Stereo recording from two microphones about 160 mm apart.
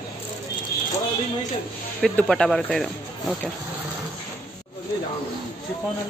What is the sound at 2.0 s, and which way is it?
Speech, 5° left (ahead or behind).